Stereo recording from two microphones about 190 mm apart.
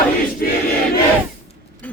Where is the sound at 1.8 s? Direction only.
5° left (ahead or behind).